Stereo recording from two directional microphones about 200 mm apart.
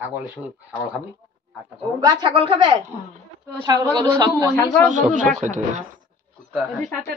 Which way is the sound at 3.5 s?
15° right (ahead or behind).